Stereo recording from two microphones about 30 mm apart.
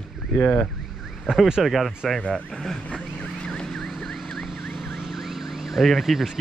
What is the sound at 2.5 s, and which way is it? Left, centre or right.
Speech, centre.